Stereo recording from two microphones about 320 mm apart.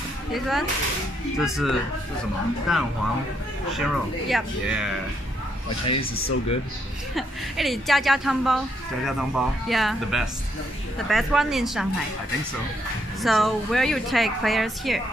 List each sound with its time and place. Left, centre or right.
0.3 s a woman's voice: centre
5.9 s speech: left
7.2 s a woman's voice: centre
13.2 s a woman's voice: centre